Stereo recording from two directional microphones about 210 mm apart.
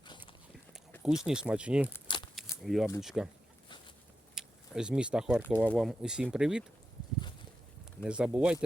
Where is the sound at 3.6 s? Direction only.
20° left (ahead or behind).